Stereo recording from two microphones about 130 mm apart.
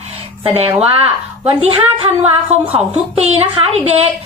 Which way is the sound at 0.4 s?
50° right (ahead or behind).